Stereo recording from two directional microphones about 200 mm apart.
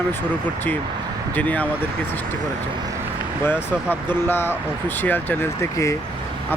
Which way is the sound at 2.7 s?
20° right (ahead or behind).